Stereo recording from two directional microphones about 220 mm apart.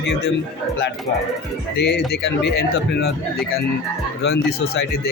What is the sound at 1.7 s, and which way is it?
Speech, 45° left (ahead or behind).